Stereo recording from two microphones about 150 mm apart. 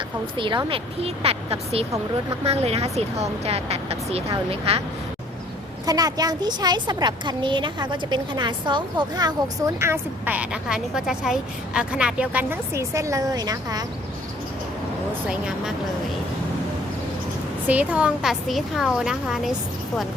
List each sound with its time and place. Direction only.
0.3 s speech: 35° right (ahead or behind)
5.8 s a woman's voice: 25° right (ahead or behind)
17.7 s a woman's voice: 10° right (ahead or behind)